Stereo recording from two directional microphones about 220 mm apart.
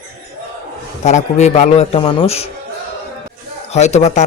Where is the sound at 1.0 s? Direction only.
30° left (ahead or behind).